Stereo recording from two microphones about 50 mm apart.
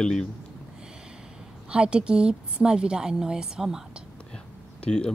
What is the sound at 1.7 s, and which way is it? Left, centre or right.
Speech, centre.